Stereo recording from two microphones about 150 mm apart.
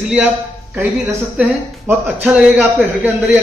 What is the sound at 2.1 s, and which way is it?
A man's voice, 5° right (ahead or behind).